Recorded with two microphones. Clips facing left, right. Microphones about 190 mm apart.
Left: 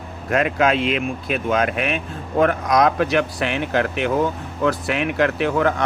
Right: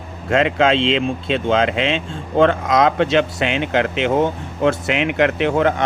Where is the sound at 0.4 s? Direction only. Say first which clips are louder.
Right 2 dB; 25° right (ahead or behind).